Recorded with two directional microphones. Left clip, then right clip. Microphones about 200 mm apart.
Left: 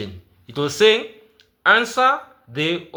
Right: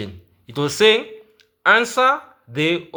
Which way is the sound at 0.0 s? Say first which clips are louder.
Even; 20° right (ahead or behind).